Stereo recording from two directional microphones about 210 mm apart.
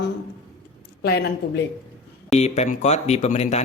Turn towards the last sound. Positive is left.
turn(degrees=30)  # may be behind; listen again after turning